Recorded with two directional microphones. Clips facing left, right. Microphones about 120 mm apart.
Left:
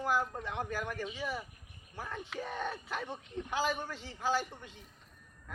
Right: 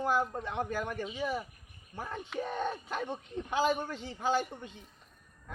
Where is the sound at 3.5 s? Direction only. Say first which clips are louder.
Right 5 dB; 20° right (ahead or behind).